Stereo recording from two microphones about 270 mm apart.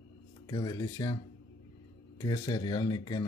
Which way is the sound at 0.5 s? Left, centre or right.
Centre.